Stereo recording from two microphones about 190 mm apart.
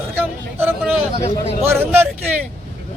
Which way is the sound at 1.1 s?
35° left (ahead or behind).